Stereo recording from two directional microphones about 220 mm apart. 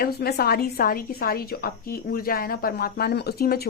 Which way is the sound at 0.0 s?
45° left (ahead or behind).